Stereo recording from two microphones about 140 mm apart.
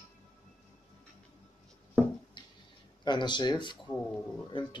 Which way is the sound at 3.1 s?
35° left (ahead or behind).